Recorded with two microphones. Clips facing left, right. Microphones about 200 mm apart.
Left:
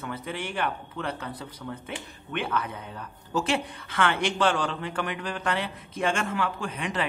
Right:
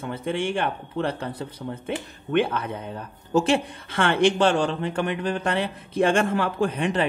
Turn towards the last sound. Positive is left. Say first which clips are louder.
# right 8 dB
turn(degrees=-30)  # may be behind; listen again after turning